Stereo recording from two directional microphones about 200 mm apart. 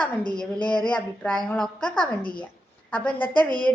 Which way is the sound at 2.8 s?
5° left (ahead or behind).